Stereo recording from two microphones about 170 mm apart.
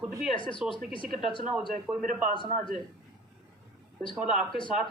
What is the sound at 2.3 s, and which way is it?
Speech, 30° left (ahead or behind).